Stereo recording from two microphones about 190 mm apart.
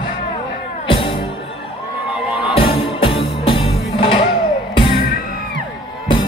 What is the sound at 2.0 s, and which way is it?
Music, 5° right (ahead or behind).